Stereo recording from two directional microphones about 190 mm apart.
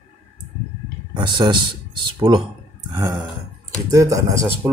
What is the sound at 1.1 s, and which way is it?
Speech, 25° right (ahead or behind).